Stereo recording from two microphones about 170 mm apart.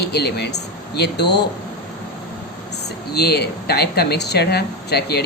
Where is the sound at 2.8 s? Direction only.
70° left (ahead or behind).